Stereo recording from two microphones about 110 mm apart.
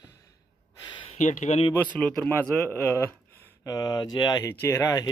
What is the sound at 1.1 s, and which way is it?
Speech, 90° left.